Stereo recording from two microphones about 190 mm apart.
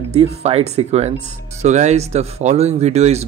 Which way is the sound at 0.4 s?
30° right (ahead or behind).